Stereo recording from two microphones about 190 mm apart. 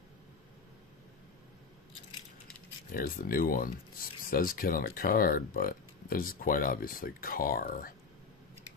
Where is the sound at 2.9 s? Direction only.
50° left (ahead or behind).